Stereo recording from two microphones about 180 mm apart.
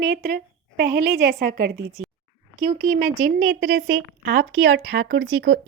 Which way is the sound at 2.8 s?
55° right (ahead or behind).